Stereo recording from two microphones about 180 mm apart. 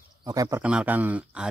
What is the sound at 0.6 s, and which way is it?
Speech, 5° right (ahead or behind).